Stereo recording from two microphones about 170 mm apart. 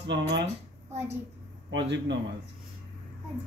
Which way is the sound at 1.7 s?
90° right.